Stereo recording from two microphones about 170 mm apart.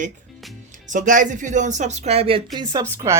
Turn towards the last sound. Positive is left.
turn(degrees=-15)  # may be behind; listen again after turning